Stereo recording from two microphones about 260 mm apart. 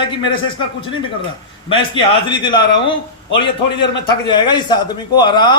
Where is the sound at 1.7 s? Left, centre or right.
Centre.